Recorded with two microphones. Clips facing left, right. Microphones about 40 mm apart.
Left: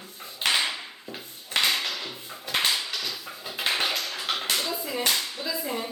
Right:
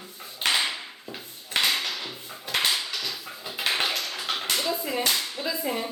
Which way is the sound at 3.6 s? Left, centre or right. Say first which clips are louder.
Even; centre.